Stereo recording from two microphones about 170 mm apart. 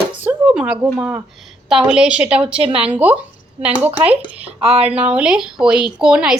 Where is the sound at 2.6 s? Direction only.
35° right (ahead or behind).